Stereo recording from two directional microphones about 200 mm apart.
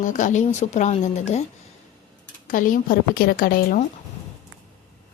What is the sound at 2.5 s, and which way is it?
A woman's voice, 40° left (ahead or behind).